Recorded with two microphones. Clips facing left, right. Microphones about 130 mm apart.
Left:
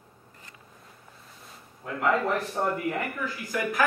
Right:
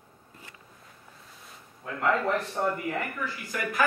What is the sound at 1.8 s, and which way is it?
Speech, 5° left (ahead or behind).